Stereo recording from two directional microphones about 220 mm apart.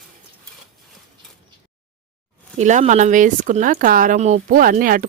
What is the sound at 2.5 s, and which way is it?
Speech, 30° right (ahead or behind).